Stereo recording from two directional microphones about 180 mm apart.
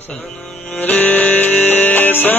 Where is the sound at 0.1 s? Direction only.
Centre (ahead or behind).